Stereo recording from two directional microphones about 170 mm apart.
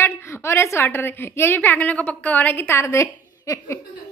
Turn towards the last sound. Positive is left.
turn(degrees=15)  # may be behind; listen again after turning